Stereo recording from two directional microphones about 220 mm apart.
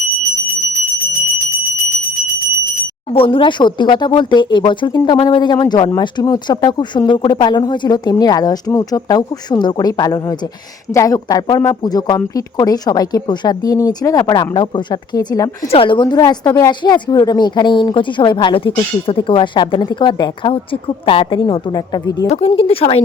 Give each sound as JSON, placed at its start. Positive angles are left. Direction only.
{"t": 3.1, "sound": "speech", "side_deg": 25}
{"t": 22.3, "sound": "speech", "side_deg": 30}